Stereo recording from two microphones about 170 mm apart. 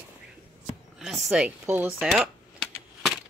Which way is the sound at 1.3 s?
10° right (ahead or behind).